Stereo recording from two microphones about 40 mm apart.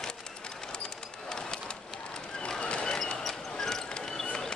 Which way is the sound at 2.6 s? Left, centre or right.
Left.